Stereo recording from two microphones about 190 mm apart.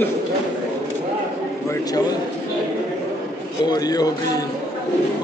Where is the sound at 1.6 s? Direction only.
20° left (ahead or behind).